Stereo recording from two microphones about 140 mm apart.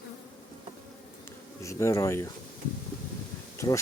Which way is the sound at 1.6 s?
20° left (ahead or behind).